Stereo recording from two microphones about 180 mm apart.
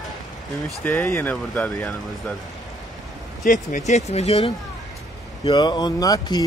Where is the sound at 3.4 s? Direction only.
45° left (ahead or behind); by 6.4 s 20° left (ahead or behind).